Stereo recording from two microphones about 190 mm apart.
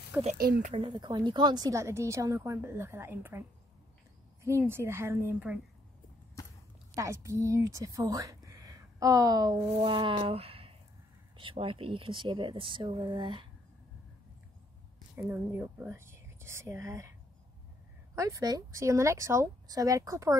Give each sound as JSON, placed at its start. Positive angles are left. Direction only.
{"t": 0.4, "sound": "speech", "side_deg": -50}
{"t": 0.7, "sound": "a woman's voice", "side_deg": -25}
{"t": 7.0, "sound": "speech", "side_deg": -15}
{"t": 15.1, "sound": "a woman's voice", "side_deg": -10}
{"t": 18.1, "sound": "a woman's voice", "side_deg": -15}